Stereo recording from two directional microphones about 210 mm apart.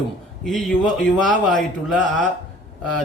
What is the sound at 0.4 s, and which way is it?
Speech, centre (ahead or behind).